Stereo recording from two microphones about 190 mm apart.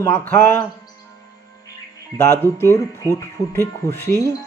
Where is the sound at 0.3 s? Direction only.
10° left (ahead or behind).